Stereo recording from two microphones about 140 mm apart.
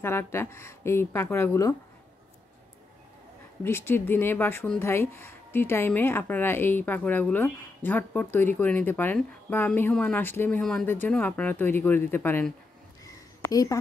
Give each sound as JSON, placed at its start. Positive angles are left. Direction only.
{"t": 0.0, "sound": "speech", "side_deg": 15}
{"t": 3.6, "sound": "speech", "side_deg": 15}
{"t": 10.6, "sound": "speech", "side_deg": 5}
{"t": 13.0, "sound": "a sound", "side_deg": 25}